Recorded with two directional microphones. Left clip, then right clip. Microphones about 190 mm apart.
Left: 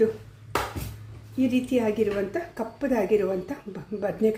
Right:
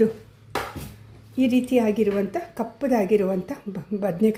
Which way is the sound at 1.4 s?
30° right (ahead or behind).